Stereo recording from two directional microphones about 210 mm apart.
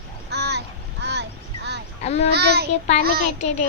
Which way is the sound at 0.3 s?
50° right (ahead or behind).